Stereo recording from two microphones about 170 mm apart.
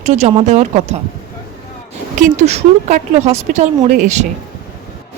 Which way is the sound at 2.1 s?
40° right (ahead or behind).